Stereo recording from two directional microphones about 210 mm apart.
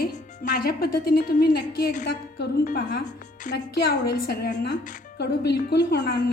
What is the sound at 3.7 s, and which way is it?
Speech, 50° left (ahead or behind).